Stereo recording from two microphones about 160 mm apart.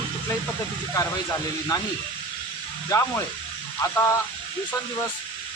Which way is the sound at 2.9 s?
20° left (ahead or behind).